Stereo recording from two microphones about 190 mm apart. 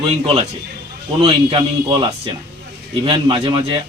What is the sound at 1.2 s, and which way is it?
A man's voice, 30° right (ahead or behind).